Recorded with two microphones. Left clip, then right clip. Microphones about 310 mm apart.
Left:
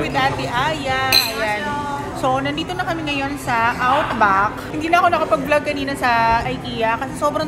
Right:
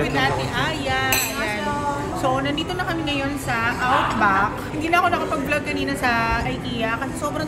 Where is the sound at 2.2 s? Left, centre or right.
Centre.